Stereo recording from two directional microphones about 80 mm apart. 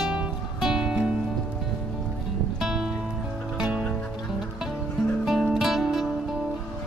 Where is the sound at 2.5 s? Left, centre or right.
Centre.